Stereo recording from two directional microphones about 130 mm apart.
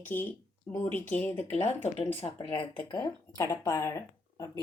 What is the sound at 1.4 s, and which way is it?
Speech, 55° left (ahead or behind).